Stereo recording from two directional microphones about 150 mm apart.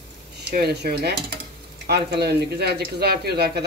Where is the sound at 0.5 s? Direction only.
90° right.